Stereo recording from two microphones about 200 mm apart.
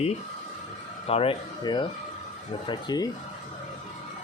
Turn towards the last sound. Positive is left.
turn(degrees=20)  # may be behind; listen again after turning